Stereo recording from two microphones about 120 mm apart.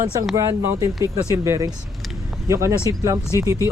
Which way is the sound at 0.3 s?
25° right (ahead or behind).